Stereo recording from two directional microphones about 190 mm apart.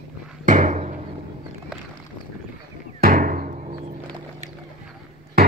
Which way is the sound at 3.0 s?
45° right (ahead or behind).